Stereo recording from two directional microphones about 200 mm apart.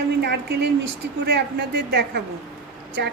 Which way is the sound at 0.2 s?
55° right (ahead or behind).